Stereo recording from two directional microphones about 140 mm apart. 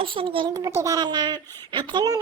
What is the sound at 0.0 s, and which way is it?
Speech, 40° right (ahead or behind).